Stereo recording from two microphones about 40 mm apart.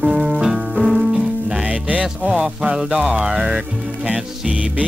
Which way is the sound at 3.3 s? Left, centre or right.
Centre.